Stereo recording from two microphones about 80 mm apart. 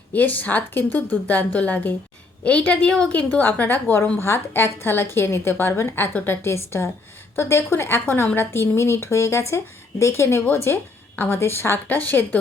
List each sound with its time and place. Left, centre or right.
0.1 s a woman's voice: left